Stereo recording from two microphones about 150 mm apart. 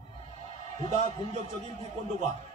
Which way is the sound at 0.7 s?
50° right (ahead or behind).